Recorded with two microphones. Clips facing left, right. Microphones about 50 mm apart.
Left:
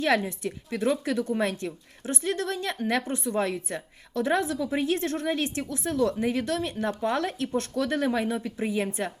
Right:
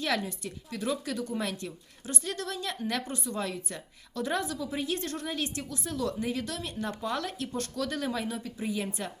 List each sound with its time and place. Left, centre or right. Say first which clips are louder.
0.0 s a woman's voice: left 6 dB; left